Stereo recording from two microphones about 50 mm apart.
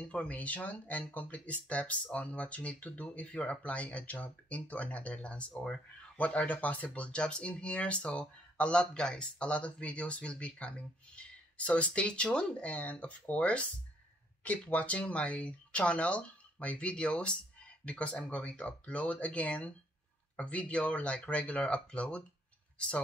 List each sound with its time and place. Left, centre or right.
0.1 s speech: left
5.5 s speech: centre
6.1 s speech: left